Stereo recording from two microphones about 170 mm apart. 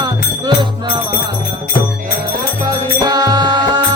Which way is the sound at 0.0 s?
25° right (ahead or behind).